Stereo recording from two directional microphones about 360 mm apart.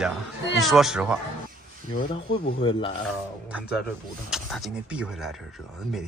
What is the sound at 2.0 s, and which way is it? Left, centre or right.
Speech, centre.